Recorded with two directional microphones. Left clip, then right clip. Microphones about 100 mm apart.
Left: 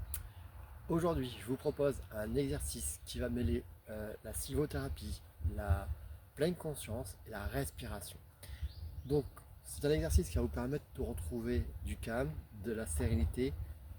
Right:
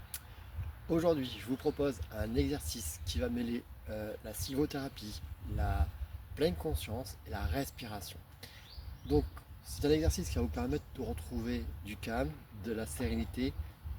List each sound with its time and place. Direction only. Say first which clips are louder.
0.9 s speech: right 4 dB; 45° left (ahead or behind)
9.8 s speech: right 3 dB; 45° left (ahead or behind)